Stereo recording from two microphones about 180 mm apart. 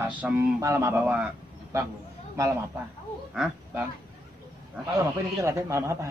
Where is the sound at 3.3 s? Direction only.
5° right (ahead or behind).